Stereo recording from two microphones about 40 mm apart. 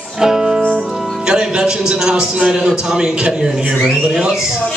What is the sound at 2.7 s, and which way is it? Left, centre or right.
Speech, centre.